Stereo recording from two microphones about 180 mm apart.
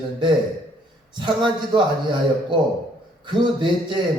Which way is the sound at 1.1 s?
25° right (ahead or behind).